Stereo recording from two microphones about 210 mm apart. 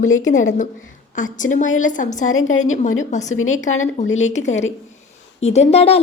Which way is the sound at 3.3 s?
75° left (ahead or behind).